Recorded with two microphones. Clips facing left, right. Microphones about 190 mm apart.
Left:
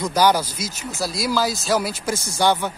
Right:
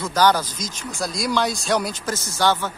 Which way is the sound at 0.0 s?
10° left (ahead or behind).